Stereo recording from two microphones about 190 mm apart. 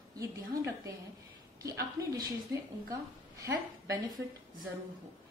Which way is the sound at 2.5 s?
15° right (ahead or behind).